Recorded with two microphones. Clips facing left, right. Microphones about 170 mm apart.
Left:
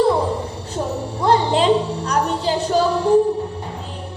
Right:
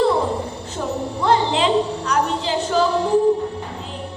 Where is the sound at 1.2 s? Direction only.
40° left (ahead or behind).